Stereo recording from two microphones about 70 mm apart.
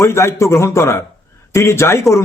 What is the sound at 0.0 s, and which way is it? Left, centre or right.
Speech, left.